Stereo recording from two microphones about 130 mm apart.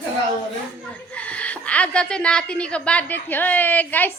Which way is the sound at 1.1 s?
10° left (ahead or behind).